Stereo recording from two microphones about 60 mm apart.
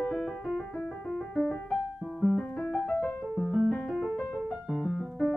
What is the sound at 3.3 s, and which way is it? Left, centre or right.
Keyboard, centre.